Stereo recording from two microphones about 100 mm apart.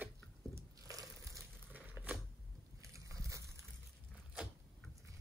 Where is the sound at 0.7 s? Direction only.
35° right (ahead or behind).